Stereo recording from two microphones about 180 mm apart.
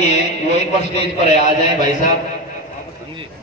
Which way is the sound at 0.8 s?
40° left (ahead or behind).